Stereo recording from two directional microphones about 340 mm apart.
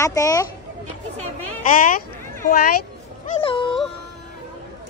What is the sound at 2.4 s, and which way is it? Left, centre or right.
Speech, left.